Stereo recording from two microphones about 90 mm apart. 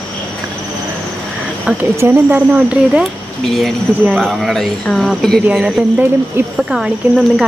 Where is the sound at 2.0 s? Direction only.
20° right (ahead or behind).